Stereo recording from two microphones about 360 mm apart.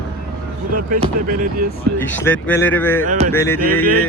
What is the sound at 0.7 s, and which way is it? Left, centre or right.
Speech, right.